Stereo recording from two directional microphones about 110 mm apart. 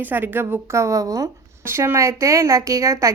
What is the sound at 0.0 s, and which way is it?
A woman's voice, 15° right (ahead or behind).